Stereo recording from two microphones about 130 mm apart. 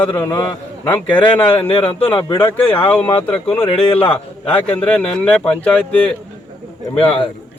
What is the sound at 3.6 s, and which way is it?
Speech, 45° left (ahead or behind).